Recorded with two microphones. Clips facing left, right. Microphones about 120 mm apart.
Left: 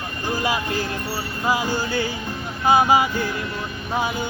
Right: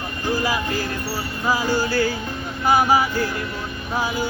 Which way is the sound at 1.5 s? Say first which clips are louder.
Right 2 dB; 20° left (ahead or behind).